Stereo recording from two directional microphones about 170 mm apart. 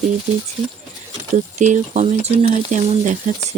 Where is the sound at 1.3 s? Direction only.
45° right (ahead or behind).